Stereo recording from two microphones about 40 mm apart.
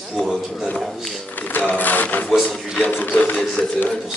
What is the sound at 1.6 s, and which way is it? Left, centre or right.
Speech, left.